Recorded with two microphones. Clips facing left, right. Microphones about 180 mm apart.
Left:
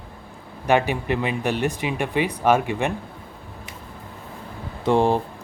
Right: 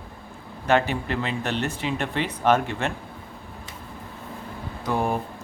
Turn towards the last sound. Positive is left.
turn(degrees=25)  # may be behind; listen again after turning